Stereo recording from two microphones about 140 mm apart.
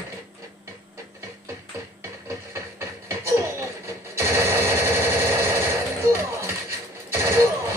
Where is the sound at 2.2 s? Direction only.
15° right (ahead or behind).